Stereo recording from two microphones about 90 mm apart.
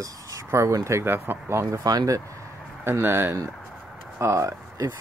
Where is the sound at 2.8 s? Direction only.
25° right (ahead or behind).